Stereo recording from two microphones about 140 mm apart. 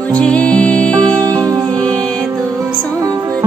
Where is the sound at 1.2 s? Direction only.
25° right (ahead or behind).